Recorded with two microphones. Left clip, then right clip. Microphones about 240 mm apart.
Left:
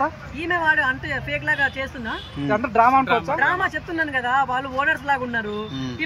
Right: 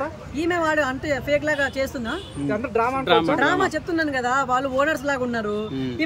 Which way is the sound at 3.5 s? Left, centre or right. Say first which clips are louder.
Right 1 dB; centre.